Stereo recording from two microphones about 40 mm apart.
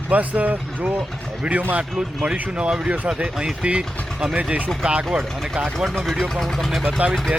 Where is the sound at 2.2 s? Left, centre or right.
Right.